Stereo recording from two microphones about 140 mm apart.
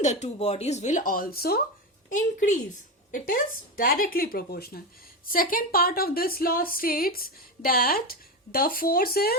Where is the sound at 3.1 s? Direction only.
80° left.